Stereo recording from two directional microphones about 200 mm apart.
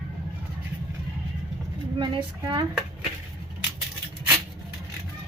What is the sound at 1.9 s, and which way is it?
Speech, 25° right (ahead or behind).